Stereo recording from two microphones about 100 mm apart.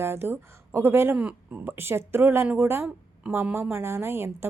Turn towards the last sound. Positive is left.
turn(degrees=-25)  # may be behind; listen again after turning